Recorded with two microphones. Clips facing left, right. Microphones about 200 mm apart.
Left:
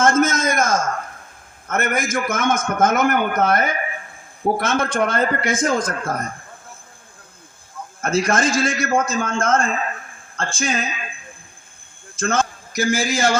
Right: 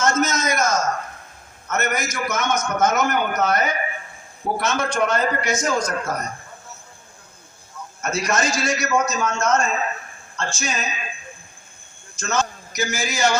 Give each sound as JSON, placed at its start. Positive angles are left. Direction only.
{"t": 0.0, "sound": "a man's voice", "side_deg": 50}
{"t": 8.0, "sound": "a man's voice", "side_deg": 55}
{"t": 12.1, "sound": "a sound", "side_deg": 55}
{"t": 12.9, "sound": "a man's voice", "side_deg": 90}
{"t": 13.1, "sound": "a man's voice", "side_deg": 50}